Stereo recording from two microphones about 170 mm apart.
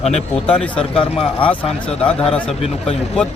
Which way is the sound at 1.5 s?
5° left (ahead or behind).